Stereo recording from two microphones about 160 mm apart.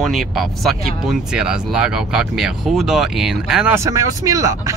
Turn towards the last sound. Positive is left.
turn(degrees=-20)  # may be behind; listen again after turning